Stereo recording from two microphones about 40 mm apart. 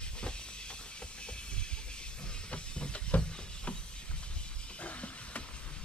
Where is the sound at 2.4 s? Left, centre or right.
Left.